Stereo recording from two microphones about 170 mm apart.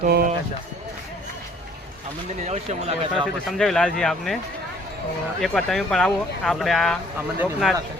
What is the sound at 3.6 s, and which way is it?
Speech, 5° left (ahead or behind).